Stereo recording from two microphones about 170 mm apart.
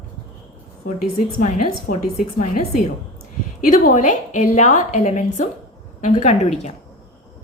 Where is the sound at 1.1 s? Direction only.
55° left (ahead or behind).